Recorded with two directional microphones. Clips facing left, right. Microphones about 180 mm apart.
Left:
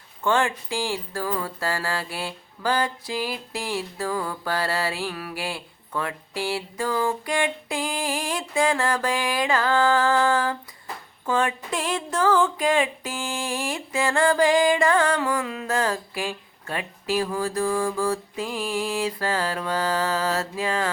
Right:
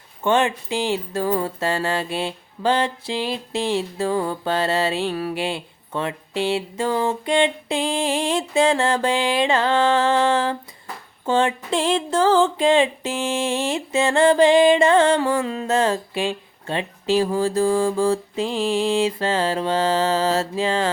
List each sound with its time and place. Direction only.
0.2 s music: 20° right (ahead or behind)